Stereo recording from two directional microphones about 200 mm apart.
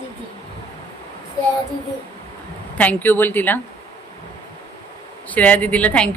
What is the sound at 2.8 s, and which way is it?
Speech, 10° left (ahead or behind).